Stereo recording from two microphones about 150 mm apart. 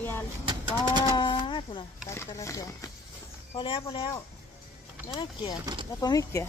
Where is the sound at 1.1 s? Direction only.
30° left (ahead or behind).